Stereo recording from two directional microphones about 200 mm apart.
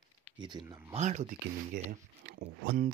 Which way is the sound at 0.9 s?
35° right (ahead or behind).